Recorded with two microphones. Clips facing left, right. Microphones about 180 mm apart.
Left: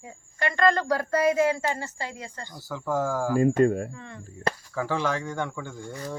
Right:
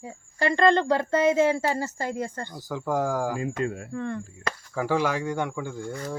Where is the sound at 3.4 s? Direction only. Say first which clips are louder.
Left 8 dB; 50° left (ahead or behind).